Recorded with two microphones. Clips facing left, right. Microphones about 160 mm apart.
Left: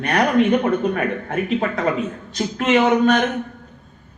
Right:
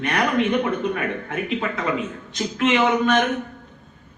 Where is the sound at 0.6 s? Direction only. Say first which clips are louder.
Left 4 dB; 45° left (ahead or behind).